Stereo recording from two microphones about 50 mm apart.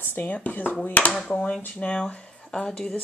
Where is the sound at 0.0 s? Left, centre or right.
Left.